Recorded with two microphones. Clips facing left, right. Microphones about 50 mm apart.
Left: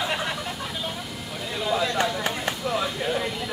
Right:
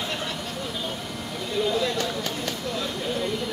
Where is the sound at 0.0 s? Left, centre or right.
Left.